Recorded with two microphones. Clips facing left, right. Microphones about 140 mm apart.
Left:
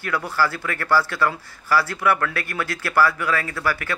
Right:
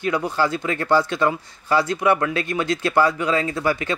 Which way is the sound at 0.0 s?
20° right (ahead or behind).